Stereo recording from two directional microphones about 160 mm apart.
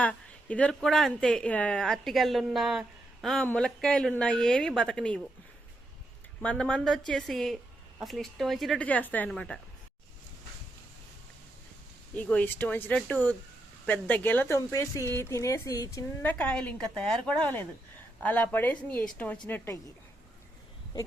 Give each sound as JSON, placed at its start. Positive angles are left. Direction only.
{"t": 0.0, "sound": "speech", "side_deg": 10}
{"t": 6.4, "sound": "speech", "side_deg": 5}
{"t": 12.1, "sound": "a woman's voice", "side_deg": 10}
{"t": 16.4, "sound": "a woman's voice", "side_deg": 5}